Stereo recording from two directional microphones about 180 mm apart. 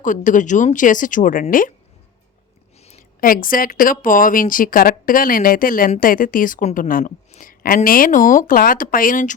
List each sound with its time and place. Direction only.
0.0 s a woman's voice: 45° left (ahead or behind)
3.2 s a woman's voice: 50° left (ahead or behind)